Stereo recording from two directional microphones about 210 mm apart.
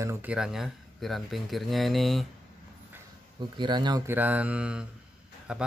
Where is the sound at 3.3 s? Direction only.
20° right (ahead or behind).